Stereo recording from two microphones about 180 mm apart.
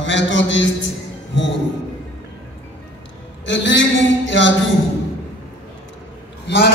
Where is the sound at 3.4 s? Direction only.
90° left.